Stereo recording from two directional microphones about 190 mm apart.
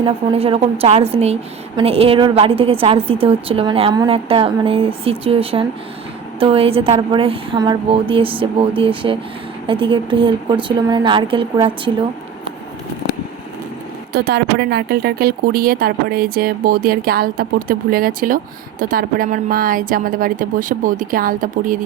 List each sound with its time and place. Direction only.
0.0 s a woman's voice: 30° right (ahead or behind)
14.1 s speech: 55° right (ahead or behind)